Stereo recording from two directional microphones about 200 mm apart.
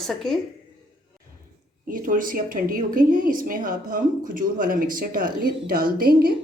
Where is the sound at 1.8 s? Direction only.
45° right (ahead or behind).